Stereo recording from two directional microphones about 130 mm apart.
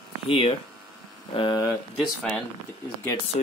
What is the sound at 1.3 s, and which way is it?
Speech, 35° left (ahead or behind).